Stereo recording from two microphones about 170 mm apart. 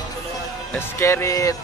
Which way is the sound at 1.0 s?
15° left (ahead or behind).